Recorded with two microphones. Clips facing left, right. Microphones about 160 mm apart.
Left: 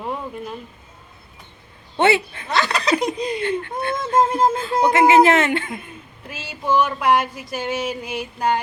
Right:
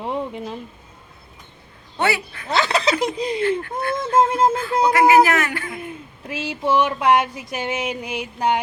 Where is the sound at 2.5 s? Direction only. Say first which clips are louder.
Even; 25° right (ahead or behind).